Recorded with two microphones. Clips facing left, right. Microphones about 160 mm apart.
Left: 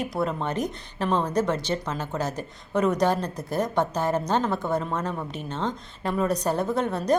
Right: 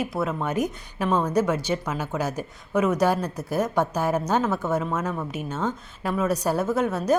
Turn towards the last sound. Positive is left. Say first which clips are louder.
# right 1 dB
turn(degrees=-5)  # may be behind; listen again after turning